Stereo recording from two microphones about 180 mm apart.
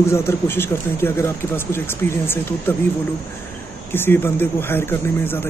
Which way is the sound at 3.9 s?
10° left (ahead or behind).